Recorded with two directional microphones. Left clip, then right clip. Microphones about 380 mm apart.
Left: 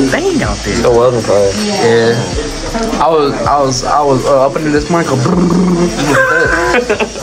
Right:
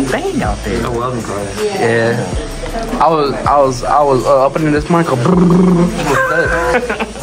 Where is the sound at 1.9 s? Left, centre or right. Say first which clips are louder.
Left 7 dB; centre.